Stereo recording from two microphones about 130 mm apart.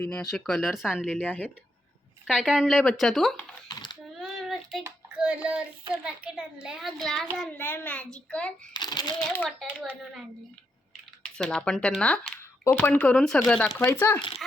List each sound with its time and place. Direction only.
0.0 s a child's voice: 5° left (ahead or behind)
1.0 s a child's voice: 10° left (ahead or behind)
2.2 s a child's voice: 5° right (ahead or behind)
3.7 s coin: 35° left (ahead or behind)
4.1 s a sound: centre (ahead or behind)
5.1 s a child's voice: 10° right (ahead or behind); by 8.5 s 10° left (ahead or behind)
8.7 s a child's voice: 35° left (ahead or behind)
9.5 s a child's voice: centre (ahead or behind)
11.2 s a child's voice: 5° left (ahead or behind)